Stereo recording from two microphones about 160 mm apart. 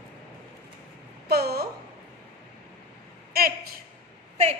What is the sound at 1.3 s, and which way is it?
Speech, 80° right.